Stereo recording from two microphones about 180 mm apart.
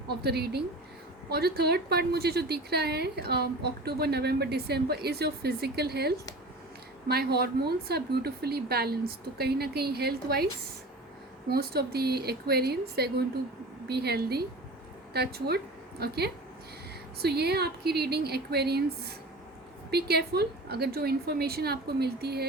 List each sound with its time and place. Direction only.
0.2 s a woman's voice: 65° right (ahead or behind)